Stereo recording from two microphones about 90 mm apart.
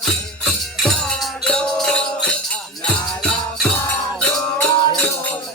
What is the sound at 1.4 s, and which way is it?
Music, 10° left (ahead or behind).